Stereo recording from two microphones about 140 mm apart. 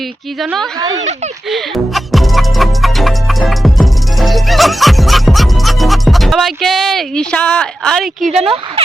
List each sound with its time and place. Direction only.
0.8 s speech: 25° right (ahead or behind)
1.5 s music: centre (ahead or behind)
8.4 s speech: 40° right (ahead or behind)